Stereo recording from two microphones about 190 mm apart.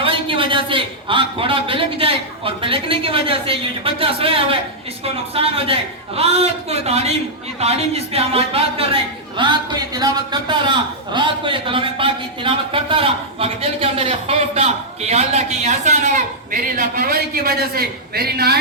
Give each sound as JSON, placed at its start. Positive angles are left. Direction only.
{"t": 0.0, "sound": "a man's voice", "side_deg": -25}